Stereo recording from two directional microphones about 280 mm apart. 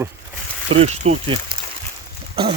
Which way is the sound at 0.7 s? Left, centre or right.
Right.